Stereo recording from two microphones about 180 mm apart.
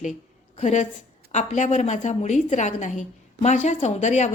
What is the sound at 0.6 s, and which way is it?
A woman's voice, 40° left (ahead or behind).